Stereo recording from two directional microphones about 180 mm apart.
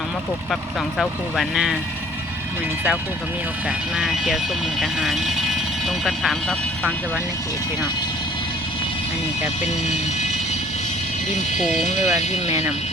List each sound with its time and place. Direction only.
0.9 s speech: centre (ahead or behind)
3.9 s speech: centre (ahead or behind)
11.5 s speech: 45° left (ahead or behind)